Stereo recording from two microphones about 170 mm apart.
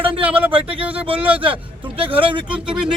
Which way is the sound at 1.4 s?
30° right (ahead or behind).